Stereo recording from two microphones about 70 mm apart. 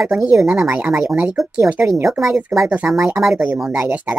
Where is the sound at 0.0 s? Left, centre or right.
Centre.